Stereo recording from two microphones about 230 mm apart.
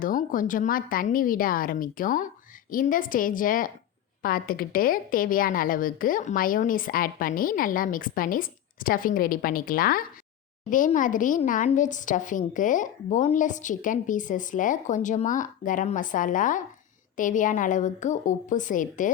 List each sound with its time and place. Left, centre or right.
0.0 s speech: left